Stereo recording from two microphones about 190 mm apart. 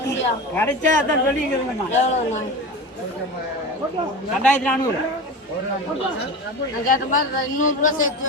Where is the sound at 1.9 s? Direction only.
35° left (ahead or behind).